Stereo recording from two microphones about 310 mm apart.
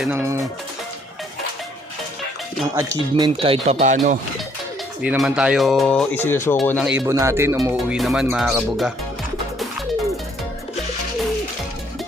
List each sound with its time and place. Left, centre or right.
0.0 s speech: centre
2.7 s speech: centre
5.0 s speech: centre